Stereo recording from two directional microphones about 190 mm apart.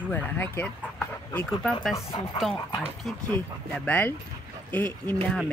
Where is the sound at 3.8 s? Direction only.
10° left (ahead or behind).